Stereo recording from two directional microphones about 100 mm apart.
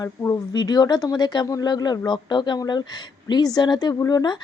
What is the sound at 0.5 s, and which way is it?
Speech, 45° left (ahead or behind).